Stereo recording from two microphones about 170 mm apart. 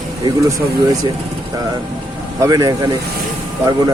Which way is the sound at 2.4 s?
20° right (ahead or behind).